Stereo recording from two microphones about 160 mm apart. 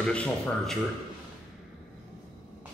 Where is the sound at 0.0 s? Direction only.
5° left (ahead or behind).